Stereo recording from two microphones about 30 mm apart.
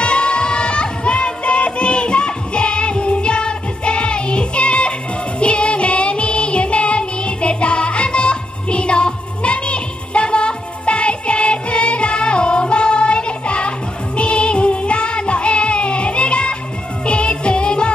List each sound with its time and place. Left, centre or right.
0.0 s music: left